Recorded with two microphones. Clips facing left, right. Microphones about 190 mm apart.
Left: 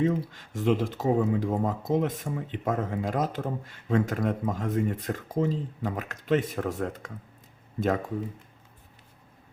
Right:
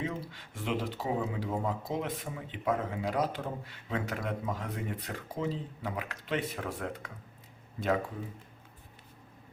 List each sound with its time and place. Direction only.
0.0 s speech: 45° left (ahead or behind)